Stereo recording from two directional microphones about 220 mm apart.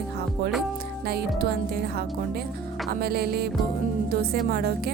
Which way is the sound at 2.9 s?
45° right (ahead or behind).